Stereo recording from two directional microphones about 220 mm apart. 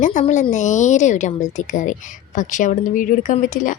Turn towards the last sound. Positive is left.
turn(degrees=35)  # may be behind; listen again after turning